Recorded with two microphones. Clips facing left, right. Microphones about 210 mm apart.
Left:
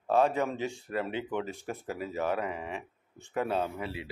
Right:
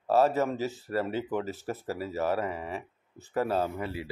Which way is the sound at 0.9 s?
40° right (ahead or behind).